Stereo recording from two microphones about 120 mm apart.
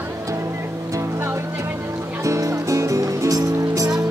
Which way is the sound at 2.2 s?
25° right (ahead or behind).